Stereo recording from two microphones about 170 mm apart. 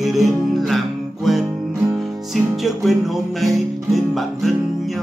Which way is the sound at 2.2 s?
Centre (ahead or behind).